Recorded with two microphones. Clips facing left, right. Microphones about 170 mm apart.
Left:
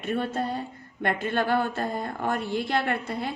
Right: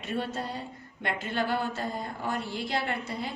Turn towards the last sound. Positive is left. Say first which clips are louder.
# left 4 dB
turn(degrees=60)  # may be behind; listen again after turning